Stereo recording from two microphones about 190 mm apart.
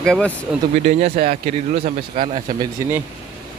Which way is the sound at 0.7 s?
35° right (ahead or behind).